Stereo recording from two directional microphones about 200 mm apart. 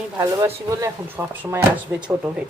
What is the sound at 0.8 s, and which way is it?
Speech, 10° right (ahead or behind).